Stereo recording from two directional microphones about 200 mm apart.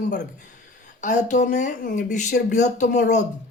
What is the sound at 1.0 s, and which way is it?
Speech, 40° left (ahead or behind).